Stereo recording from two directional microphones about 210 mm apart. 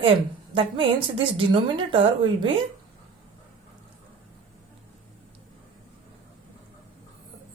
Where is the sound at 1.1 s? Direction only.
25° right (ahead or behind).